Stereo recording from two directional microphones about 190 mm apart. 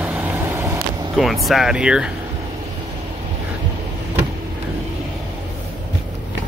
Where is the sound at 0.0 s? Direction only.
10° right (ahead or behind).